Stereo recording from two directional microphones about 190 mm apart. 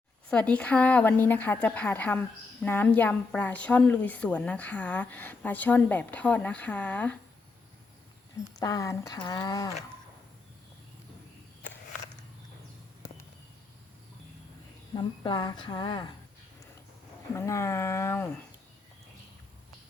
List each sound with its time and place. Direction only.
0.3 s speech: 5° left (ahead or behind)
8.5 s speech: 20° left (ahead or behind)
14.9 s speech: 25° left (ahead or behind)
17.3 s speech: 15° left (ahead or behind)